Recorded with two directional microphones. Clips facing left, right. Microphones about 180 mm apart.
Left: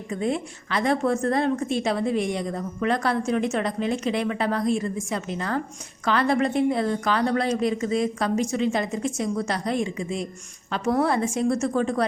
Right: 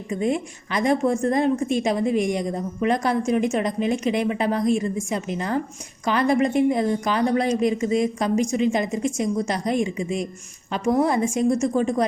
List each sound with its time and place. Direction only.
0.1 s a woman's voice: 15° right (ahead or behind)